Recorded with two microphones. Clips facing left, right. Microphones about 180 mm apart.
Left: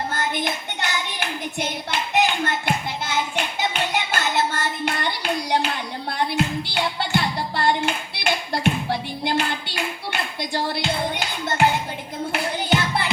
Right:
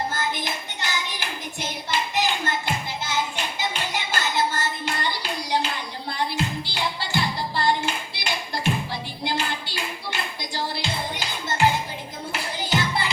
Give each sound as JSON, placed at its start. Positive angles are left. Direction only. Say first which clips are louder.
{"t": 0.1, "sound": "hands", "louder": "left 3 dB", "side_deg": 60}
{"t": 12.3, "sound": "music", "louder": "left 4 dB", "side_deg": 60}